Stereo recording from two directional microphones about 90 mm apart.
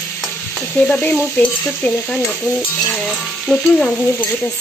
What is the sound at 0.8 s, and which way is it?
Sizzle, 15° left (ahead or behind).